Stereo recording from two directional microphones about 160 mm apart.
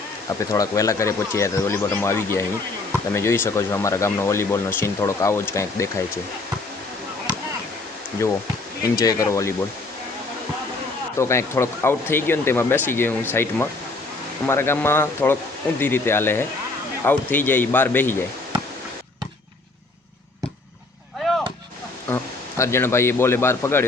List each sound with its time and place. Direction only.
0.3 s speech: 20° left (ahead or behind)
9.0 s speech: 20° left (ahead or behind)
11.2 s speech: 15° left (ahead or behind)
22.1 s a man's voice: 15° left (ahead or behind)